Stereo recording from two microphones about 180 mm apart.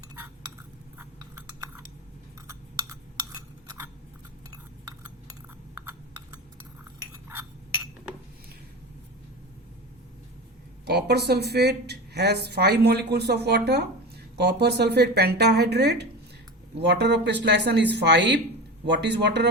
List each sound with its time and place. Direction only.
0.9 s chewing: 10° right (ahead or behind)
10.8 s a woman's voice: 65° right (ahead or behind)